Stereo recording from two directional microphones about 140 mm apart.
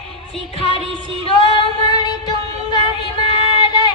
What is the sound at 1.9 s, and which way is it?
Female singing, 30° left (ahead or behind).